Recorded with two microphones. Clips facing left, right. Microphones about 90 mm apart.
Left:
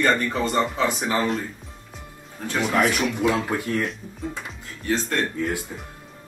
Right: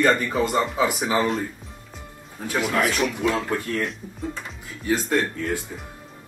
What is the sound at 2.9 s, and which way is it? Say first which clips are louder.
Speech: left 1 dB; 15° left (ahead or behind).